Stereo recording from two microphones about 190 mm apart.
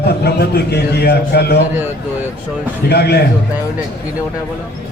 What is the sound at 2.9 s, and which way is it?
Speech, 60° left (ahead or behind).